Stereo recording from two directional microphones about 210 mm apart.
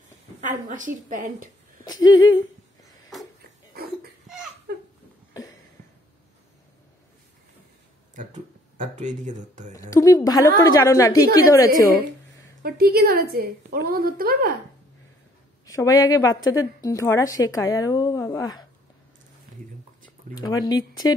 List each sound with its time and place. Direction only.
0.7 s speech: 40° right (ahead or behind)
1.9 s speech: 20° left (ahead or behind)
3.1 s a sound: centre (ahead or behind)
3.7 s a sound: 45° right (ahead or behind)
8.7 s speech: 35° right (ahead or behind)
9.8 s a woman's voice: 15° left (ahead or behind)
12.6 s a woman's voice: 45° right (ahead or behind)
15.6 s a woman's voice: 15° left (ahead or behind)
20.3 s speech: 20° left (ahead or behind)